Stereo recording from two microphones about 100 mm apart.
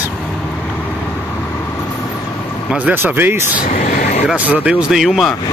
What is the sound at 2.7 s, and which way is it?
Speech, 20° right (ahead or behind).